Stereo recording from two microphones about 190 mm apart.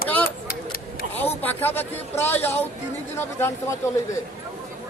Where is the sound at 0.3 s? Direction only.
50° left (ahead or behind).